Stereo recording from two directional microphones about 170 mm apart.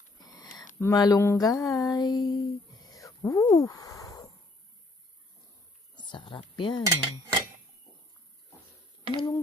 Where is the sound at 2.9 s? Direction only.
20° left (ahead or behind).